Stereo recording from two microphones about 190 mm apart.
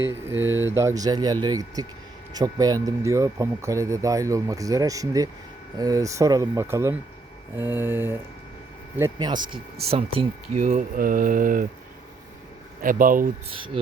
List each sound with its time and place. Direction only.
0.0 s speech: 10° right (ahead or behind)
9.9 s speech: 35° right (ahead or behind)
12.8 s speech: 45° right (ahead or behind)